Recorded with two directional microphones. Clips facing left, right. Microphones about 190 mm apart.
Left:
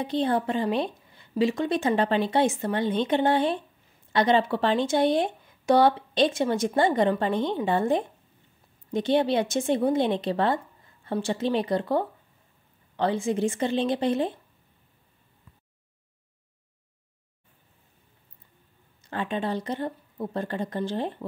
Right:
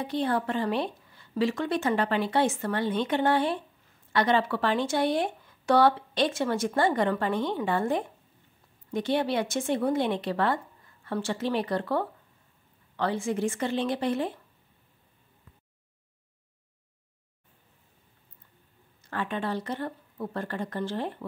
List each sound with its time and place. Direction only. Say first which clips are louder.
0.0 s speech: left 3 dB; 20° left (ahead or behind)
19.0 s speech: left 2 dB; 20° left (ahead or behind)